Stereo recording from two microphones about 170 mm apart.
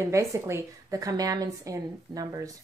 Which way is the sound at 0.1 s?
15° right (ahead or behind).